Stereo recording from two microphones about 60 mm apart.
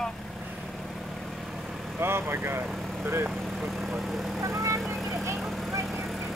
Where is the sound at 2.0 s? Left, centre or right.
Right.